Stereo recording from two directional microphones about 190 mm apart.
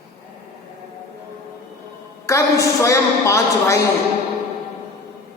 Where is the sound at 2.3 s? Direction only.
15° left (ahead or behind).